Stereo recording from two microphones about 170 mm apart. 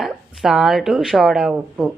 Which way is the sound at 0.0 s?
Centre (ahead or behind).